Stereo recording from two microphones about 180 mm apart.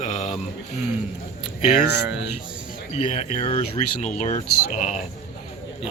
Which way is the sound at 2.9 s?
40° left (ahead or behind).